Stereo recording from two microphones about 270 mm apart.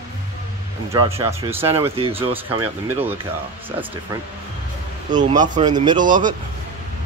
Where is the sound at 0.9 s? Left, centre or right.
Centre.